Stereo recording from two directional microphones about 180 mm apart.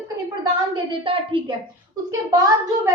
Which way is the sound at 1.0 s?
30° right (ahead or behind).